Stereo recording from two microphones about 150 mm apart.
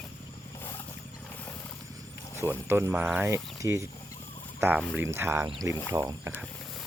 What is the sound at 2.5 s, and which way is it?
Speech, 15° right (ahead or behind).